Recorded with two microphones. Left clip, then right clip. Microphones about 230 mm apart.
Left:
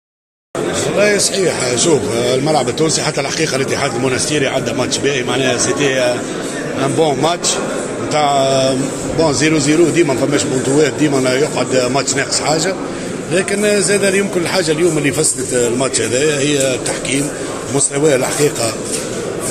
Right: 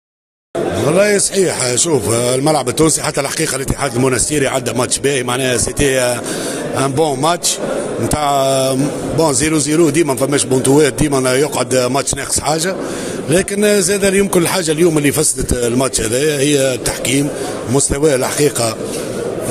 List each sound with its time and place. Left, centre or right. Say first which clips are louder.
0.9 s speech: even; right
8.2 s mantra: left 1 dB; right
9.2 s speech: left 1 dB; right